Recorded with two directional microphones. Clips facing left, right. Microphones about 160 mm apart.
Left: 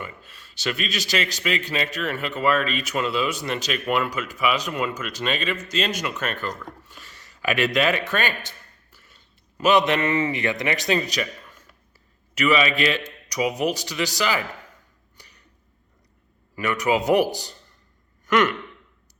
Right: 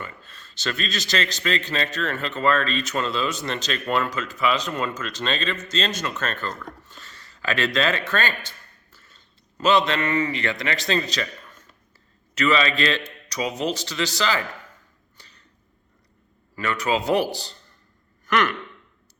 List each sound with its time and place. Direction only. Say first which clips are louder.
0.0 s a man's voice: left 1 dB; 10° left (ahead or behind)
15.2 s a sound: left 1 dB; 15° left (ahead or behind)
16.6 s speech: left 2 dB; 15° left (ahead or behind)